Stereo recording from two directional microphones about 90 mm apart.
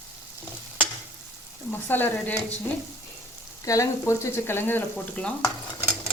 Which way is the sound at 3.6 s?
35° left (ahead or behind).